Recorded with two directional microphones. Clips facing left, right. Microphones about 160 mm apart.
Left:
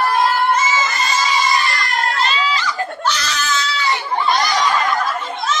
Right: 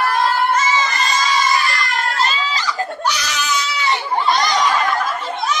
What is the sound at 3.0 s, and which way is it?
Baby cry, 15° right (ahead or behind).